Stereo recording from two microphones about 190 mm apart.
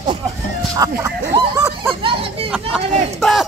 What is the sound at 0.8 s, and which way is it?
Speech, 15° right (ahead or behind).